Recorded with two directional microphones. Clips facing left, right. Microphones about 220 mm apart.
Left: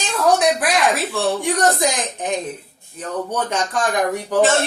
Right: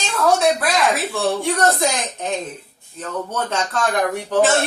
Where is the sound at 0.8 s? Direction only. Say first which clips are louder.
Left 1 dB; centre (ahead or behind).